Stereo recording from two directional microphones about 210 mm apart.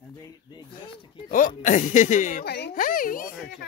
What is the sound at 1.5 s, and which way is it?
Speech, 35° left (ahead or behind).